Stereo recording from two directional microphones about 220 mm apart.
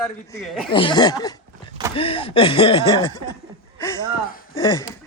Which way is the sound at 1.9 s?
25° left (ahead or behind).